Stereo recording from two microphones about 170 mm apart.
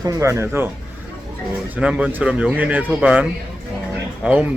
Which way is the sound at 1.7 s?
5° right (ahead or behind).